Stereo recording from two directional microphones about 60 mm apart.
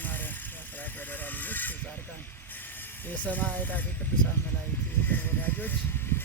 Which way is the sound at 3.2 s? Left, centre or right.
Left.